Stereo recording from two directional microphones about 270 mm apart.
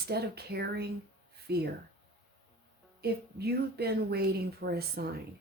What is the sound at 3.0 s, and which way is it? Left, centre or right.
Speech, right.